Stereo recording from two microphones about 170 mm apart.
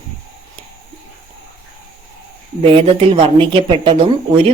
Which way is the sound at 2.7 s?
30° right (ahead or behind).